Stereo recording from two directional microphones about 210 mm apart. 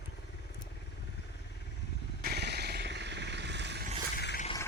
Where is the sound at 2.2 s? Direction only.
50° right (ahead or behind).